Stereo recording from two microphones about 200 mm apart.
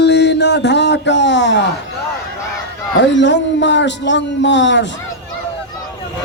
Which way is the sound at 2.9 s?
65° left (ahead or behind).